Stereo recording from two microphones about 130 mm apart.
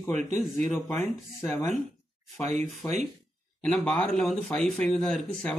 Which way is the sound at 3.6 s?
5° left (ahead or behind).